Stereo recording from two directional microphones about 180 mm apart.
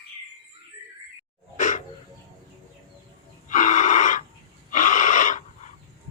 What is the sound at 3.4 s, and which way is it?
Gasp, 45° left (ahead or behind).